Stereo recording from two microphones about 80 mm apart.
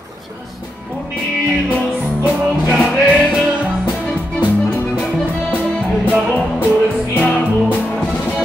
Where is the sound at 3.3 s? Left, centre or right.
Centre.